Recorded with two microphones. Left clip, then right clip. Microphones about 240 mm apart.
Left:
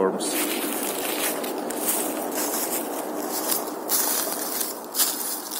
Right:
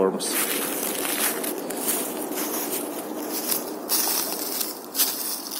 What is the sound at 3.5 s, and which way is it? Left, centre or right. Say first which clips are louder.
Walk: left 1 dB; centre.